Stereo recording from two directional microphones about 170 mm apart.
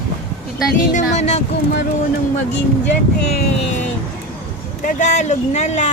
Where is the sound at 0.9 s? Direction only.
40° left (ahead or behind).